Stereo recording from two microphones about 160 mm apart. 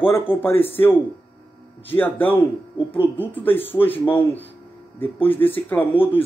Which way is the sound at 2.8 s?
30° left (ahead or behind).